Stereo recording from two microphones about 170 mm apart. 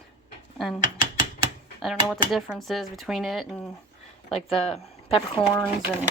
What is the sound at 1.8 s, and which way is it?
Speech, centre (ahead or behind).